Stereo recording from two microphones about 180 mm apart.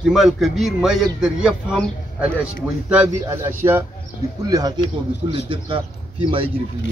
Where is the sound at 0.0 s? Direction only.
Centre (ahead or behind); by 6.5 s 30° right (ahead or behind).